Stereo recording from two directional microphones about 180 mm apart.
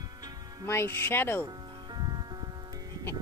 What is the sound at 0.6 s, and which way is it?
Speech, 15° left (ahead or behind).